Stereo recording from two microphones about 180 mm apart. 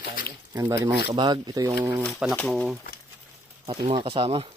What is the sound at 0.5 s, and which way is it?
Speech, 20° right (ahead or behind).